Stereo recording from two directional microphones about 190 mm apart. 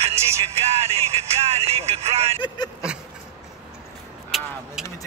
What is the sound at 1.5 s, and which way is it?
Speech, 35° right (ahead or behind).